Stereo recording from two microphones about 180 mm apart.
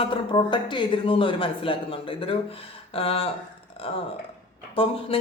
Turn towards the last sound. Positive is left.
turn(degrees=30)  # may be behind; listen again after turning